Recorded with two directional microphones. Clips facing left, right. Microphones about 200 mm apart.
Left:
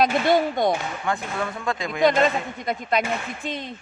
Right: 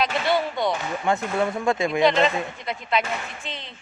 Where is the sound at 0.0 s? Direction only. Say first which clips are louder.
Left 4 dB; 45° left (ahead or behind).